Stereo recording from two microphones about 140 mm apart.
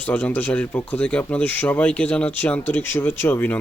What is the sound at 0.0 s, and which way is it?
Speech, 10° left (ahead or behind).